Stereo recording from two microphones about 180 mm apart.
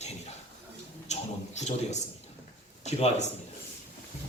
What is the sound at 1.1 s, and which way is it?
A man's voice, 40° left (ahead or behind).